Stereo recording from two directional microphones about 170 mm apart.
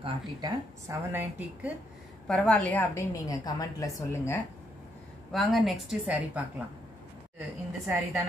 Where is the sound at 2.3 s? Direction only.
10° left (ahead or behind).